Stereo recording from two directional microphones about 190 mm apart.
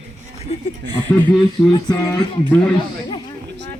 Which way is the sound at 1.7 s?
20° left (ahead or behind).